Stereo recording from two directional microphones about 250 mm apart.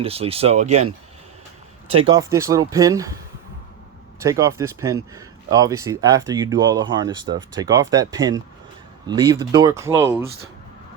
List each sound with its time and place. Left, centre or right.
0.0 s speech: right
1.9 s speech: right
2.1 s speech: centre
4.2 s speech: centre